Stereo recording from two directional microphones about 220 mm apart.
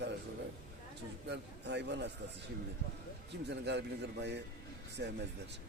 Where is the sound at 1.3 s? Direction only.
50° right (ahead or behind).